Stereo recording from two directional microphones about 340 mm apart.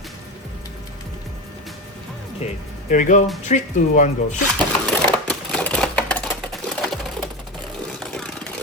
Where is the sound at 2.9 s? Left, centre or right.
Left.